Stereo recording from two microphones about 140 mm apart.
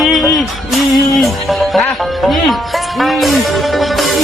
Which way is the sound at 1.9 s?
Centre (ahead or behind).